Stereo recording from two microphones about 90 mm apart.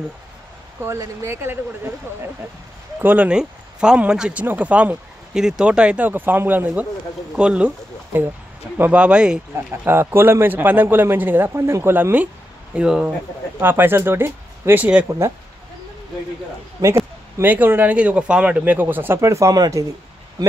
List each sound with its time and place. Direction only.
0.8 s a man's voice: 30° right (ahead or behind)
3.0 s speech: 20° right (ahead or behind)
8.7 s speech: 20° right (ahead or behind)
9.8 s a man's voice: 25° right (ahead or behind)
13.6 s a man's voice: 25° right (ahead or behind)
16.8 s speech: 40° right (ahead or behind)
17.4 s a man's voice: 20° right (ahead or behind)
19.2 s speech: 35° right (ahead or behind)